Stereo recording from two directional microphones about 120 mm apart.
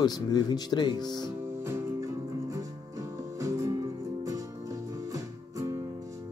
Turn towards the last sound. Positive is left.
turn(degrees=-25)  # may be behind; listen again after turning